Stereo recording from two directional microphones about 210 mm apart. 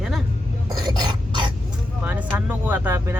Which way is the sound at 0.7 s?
20° right (ahead or behind).